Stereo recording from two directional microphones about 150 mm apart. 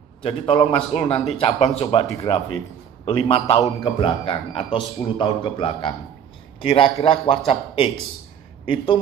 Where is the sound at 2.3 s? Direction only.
30° left (ahead or behind).